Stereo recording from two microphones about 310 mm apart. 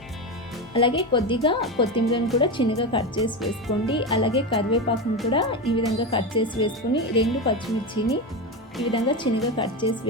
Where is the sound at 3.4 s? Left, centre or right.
Centre.